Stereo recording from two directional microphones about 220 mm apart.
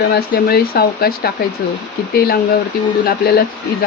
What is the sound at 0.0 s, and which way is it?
Speech, 45° left (ahead or behind).